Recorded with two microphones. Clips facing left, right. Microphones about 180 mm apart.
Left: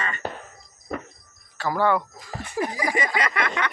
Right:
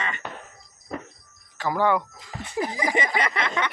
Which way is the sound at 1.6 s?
15° right (ahead or behind).